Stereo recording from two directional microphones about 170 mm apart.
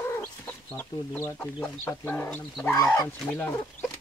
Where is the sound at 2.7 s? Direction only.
20° left (ahead or behind).